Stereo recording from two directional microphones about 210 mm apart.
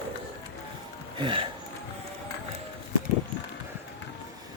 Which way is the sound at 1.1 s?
25° right (ahead or behind).